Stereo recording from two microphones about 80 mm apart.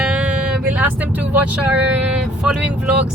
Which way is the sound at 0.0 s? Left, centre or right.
Centre.